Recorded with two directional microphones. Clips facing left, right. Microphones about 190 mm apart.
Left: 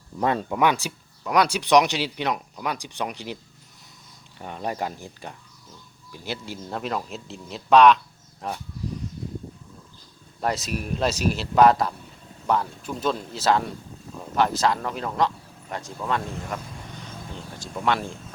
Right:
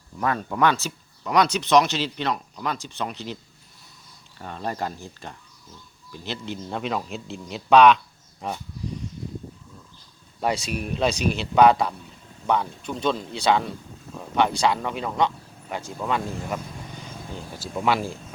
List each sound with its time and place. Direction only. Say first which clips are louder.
0.2 s speech: left 2 dB; 25° left (ahead or behind)
0.4 s speech: even; 15° left (ahead or behind)
4.4 s a man's voice: left 1 dB; 15° left (ahead or behind)
10.4 s a man's voice: right 1 dB; centre (ahead or behind)
17.6 s speech: right 2 dB; 5° right (ahead or behind)